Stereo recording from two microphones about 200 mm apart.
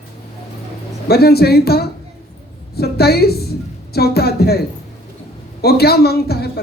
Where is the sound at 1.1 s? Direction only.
50° left (ahead or behind).